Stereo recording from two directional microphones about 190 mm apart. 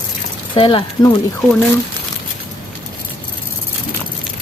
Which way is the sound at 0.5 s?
25° left (ahead or behind).